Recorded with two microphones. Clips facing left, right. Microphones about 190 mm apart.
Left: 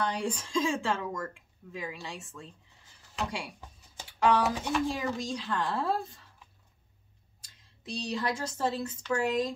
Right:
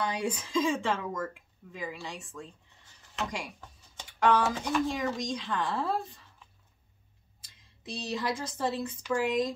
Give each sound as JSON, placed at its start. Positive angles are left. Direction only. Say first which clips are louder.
{"t": 0.0, "sound": "speech", "louder": "even", "side_deg": -5}
{"t": 7.4, "sound": "a woman's voice", "louder": "even", "side_deg": 0}